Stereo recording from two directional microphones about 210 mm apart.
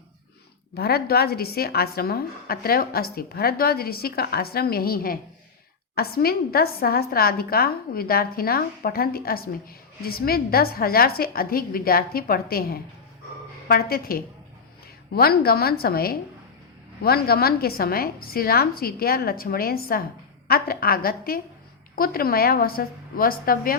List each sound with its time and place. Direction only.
0.7 s a woman's voice: 50° left (ahead or behind)